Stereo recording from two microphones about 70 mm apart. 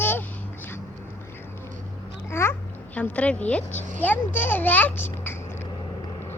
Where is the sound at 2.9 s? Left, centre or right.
Centre.